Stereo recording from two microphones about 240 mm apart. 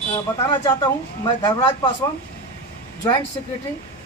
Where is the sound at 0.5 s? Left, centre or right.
Centre.